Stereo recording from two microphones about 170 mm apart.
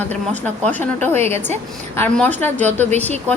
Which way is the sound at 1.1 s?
40° right (ahead or behind).